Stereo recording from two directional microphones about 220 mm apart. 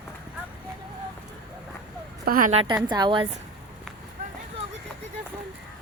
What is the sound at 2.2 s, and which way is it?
Speech, 40° right (ahead or behind).